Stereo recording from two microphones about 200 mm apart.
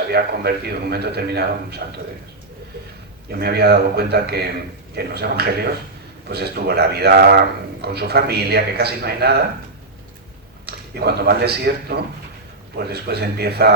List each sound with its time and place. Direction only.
0.1 s a man's voice: 50° right (ahead or behind)
3.3 s a man's voice: 55° right (ahead or behind)
10.7 s a man's voice: 55° right (ahead or behind)